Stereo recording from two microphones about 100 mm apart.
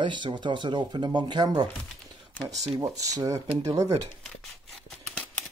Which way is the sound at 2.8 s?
35° right (ahead or behind).